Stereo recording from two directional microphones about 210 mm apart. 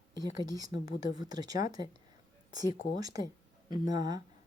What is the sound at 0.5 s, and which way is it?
Speech, 15° right (ahead or behind).